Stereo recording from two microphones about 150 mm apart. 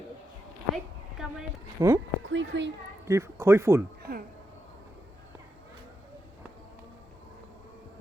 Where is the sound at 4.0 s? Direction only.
85° right.